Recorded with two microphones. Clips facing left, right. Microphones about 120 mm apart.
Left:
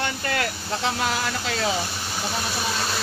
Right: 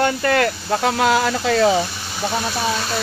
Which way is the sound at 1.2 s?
55° right (ahead or behind).